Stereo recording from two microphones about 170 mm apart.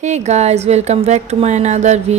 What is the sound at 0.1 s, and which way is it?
A woman's voice, 40° right (ahead or behind).